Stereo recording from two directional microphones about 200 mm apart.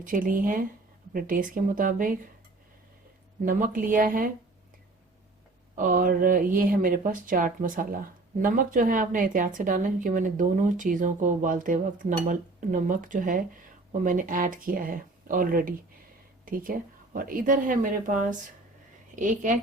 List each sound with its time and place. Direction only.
0.0 s speech: 45° right (ahead or behind)
3.4 s speech: 45° right (ahead or behind)
5.7 s a woman's voice: 40° right (ahead or behind)